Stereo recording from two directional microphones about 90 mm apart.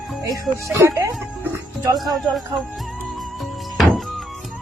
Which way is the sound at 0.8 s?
35° right (ahead or behind).